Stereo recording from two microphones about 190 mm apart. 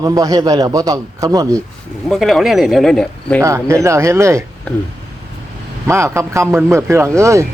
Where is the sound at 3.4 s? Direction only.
15° right (ahead or behind).